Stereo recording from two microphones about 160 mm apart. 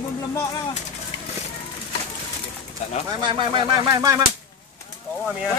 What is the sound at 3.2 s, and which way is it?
Speech, 30° right (ahead or behind).